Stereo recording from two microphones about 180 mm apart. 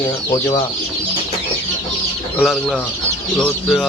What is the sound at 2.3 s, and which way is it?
Speech, 5° left (ahead or behind).